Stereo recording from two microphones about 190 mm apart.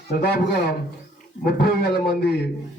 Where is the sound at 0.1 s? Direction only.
55° left (ahead or behind).